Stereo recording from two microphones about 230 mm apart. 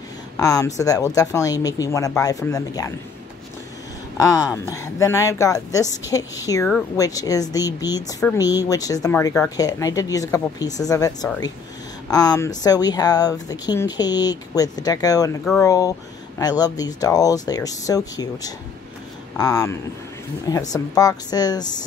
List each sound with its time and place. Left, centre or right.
0.4 s speech: centre
4.2 s speech: centre